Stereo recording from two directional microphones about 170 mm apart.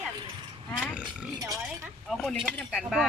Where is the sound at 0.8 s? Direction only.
5° right (ahead or behind).